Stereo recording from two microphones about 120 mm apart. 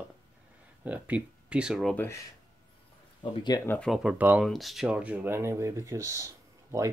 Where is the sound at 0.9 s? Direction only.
10° right (ahead or behind).